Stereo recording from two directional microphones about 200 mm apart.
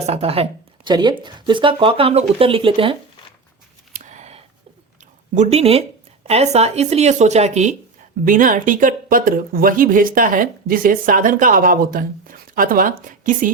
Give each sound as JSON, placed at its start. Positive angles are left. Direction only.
{"t": 0.0, "sound": "speech", "side_deg": -30}
{"t": 3.9, "sound": "a sound", "side_deg": -35}
{"t": 5.3, "sound": "speech", "side_deg": -35}